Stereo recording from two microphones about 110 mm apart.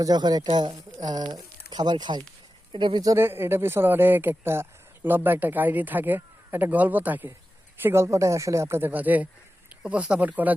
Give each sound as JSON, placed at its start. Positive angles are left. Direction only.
{"t": 0.0, "sound": "speech", "side_deg": -40}
{"t": 3.2, "sound": "speech", "side_deg": -20}